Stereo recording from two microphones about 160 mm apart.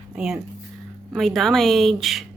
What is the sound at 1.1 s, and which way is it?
Speech, centre (ahead or behind).